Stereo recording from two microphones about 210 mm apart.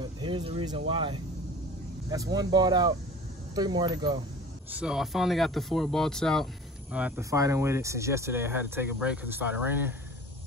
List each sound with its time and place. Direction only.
0.0 s speech: 20° right (ahead or behind)
4.7 s speech: 5° right (ahead or behind)